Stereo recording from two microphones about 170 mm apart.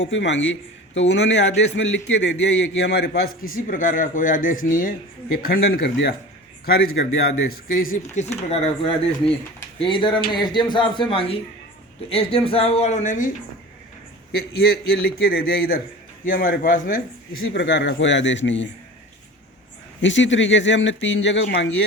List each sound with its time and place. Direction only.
0.0 s a man's voice: 90° left; by 13.3 s 50° left (ahead or behind)
14.3 s speech: 65° left (ahead or behind)
17.5 s speech: 90° left
20.0 s speech: 90° left